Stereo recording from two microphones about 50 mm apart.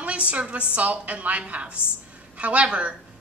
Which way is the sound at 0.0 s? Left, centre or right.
Right.